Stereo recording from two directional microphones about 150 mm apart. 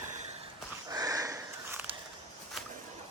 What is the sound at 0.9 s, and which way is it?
Sniff, 25° right (ahead or behind).